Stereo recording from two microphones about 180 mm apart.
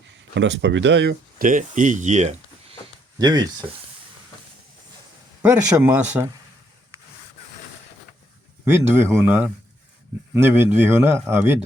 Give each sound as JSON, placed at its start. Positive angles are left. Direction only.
{"t": 0.1, "sound": "speech", "side_deg": -80}
{"t": 1.5, "sound": "speech", "side_deg": -45}
{"t": 3.2, "sound": "speech", "side_deg": -20}
{"t": 5.4, "sound": "a man's voice", "side_deg": -10}
{"t": 9.0, "sound": "a man's voice", "side_deg": -15}